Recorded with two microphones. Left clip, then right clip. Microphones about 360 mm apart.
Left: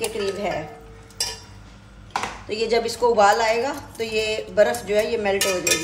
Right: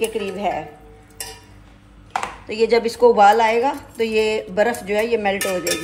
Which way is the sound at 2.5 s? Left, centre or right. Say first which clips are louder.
Right 5 dB; right.